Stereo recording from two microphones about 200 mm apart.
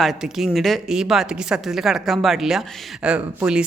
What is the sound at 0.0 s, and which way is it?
Speech, centre (ahead or behind).